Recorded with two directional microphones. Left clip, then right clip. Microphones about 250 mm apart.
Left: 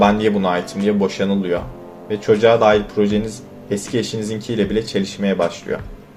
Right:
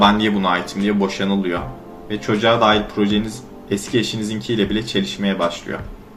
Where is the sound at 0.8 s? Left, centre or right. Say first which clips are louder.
Left 3 dB; left.